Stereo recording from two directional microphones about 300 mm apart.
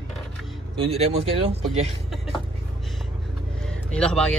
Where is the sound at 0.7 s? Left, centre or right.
Centre.